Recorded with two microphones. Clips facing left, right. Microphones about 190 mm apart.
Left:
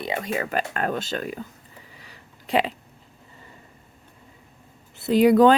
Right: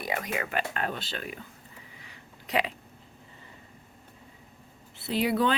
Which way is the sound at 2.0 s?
30° left (ahead or behind).